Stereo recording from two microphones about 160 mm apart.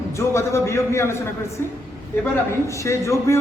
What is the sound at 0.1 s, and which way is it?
A man's voice, 15° left (ahead or behind).